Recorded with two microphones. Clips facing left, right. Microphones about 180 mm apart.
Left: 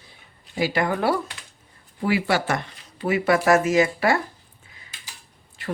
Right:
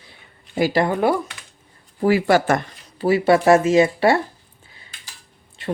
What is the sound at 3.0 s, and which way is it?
Speech, 30° right (ahead or behind).